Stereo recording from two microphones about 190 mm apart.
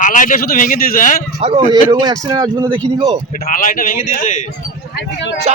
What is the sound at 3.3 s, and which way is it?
A man's voice, 50° left (ahead or behind).